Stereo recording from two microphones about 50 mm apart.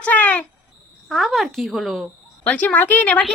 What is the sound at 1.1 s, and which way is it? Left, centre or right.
Speech, centre.